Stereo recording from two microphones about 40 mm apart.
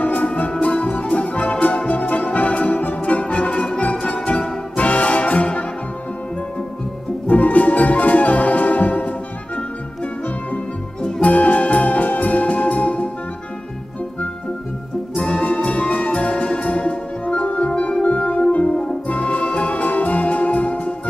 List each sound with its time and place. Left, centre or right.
0.0 s music: left
4.0 s music: left
7.2 s music: left
11.1 s music: left
15.1 s music: left
15.4 s music: left